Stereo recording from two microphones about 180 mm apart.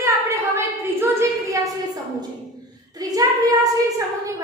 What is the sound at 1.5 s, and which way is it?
Speech, 20° right (ahead or behind).